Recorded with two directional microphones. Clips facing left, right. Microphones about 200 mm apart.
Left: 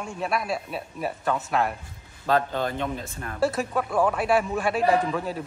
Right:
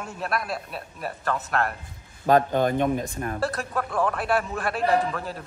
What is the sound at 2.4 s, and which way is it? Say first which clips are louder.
Speech: right 5 dB; 15° right (ahead or behind).